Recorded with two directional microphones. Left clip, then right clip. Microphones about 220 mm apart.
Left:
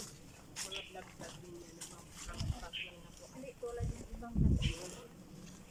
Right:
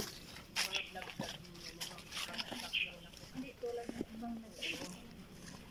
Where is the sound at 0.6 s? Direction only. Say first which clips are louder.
Right 8 dB; 45° right (ahead or behind).